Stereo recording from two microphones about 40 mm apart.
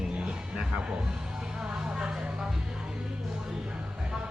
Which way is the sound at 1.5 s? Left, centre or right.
Right.